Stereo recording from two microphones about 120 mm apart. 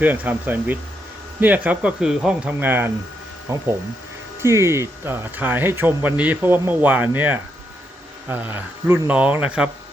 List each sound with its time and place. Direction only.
0.0 s speech: 15° right (ahead or behind)